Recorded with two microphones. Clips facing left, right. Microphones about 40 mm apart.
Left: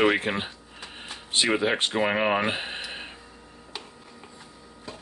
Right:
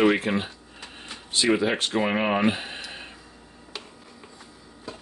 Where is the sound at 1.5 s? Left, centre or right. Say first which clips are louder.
Right 3 dB; centre.